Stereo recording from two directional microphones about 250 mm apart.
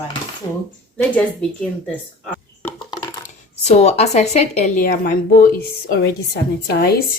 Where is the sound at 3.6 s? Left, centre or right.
Left.